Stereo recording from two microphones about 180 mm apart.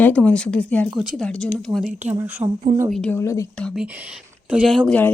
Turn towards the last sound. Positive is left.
turn(degrees=5)  # may be behind; listen again after turning